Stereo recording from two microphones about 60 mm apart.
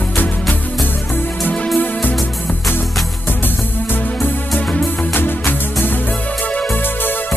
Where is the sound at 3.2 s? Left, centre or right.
Left.